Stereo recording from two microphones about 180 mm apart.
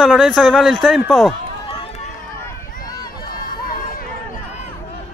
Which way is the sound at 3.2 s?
55° left (ahead or behind).